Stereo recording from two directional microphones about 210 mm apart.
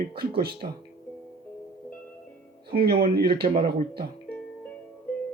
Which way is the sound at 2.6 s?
45° right (ahead or behind).